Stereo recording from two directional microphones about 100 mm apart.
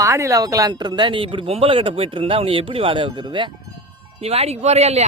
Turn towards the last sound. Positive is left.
turn(degrees=-90)